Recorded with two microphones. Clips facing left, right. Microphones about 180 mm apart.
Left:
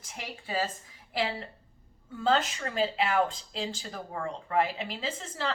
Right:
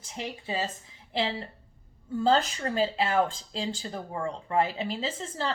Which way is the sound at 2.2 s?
35° right (ahead or behind).